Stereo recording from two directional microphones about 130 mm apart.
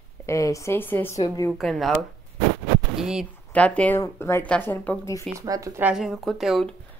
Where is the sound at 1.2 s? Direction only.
30° left (ahead or behind).